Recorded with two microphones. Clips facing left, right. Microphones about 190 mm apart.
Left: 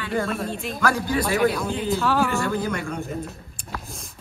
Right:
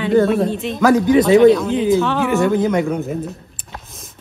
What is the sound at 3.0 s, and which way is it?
Speech, centre (ahead or behind).